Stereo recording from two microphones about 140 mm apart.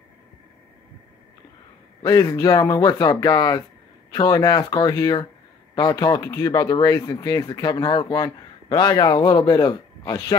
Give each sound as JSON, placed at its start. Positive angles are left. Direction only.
{"t": 2.0, "sound": "speech", "side_deg": 25}